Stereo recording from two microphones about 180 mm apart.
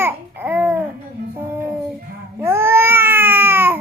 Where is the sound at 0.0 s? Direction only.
10° right (ahead or behind).